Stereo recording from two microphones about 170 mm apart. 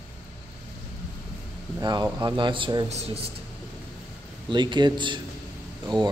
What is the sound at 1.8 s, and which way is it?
A man's voice, 25° right (ahead or behind).